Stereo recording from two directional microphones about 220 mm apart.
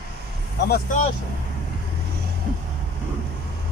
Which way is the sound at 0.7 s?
40° left (ahead or behind).